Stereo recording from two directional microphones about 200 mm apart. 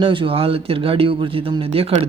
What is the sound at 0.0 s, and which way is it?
Speech, 25° right (ahead or behind).